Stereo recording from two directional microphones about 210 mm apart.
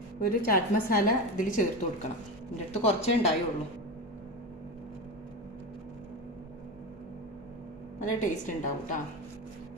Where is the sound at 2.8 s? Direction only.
30° left (ahead or behind).